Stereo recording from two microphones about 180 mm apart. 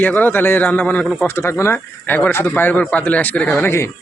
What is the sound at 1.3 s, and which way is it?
Speech, 15° left (ahead or behind).